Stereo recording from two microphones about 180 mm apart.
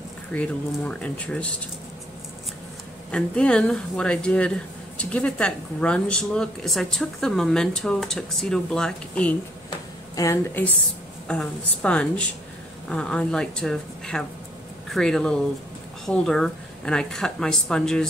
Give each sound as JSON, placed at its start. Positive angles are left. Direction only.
{"t": 0.3, "sound": "speech", "side_deg": 5}
{"t": 3.1, "sound": "speech", "side_deg": 5}
{"t": 9.7, "sound": "a sound", "side_deg": 20}
{"t": 11.2, "sound": "speech", "side_deg": 5}